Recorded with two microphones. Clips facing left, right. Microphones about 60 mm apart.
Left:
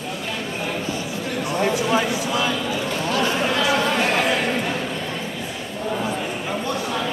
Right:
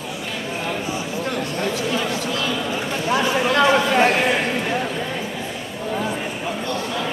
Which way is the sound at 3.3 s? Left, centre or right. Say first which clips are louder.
Right 4 dB; centre.